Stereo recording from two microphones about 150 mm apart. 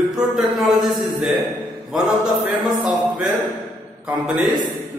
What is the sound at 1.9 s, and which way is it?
Mantra, centre (ahead or behind).